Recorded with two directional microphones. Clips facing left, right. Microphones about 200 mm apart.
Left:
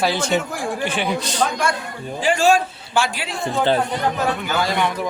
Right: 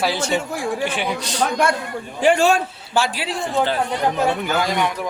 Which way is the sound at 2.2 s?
60° right (ahead or behind).